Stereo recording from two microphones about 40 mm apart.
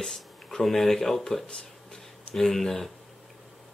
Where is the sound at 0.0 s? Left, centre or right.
Centre.